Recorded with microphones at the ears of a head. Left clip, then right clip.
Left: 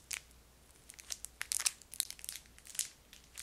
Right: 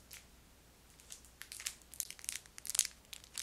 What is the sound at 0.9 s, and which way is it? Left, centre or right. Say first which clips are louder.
Crumpling: left 10 dB; left.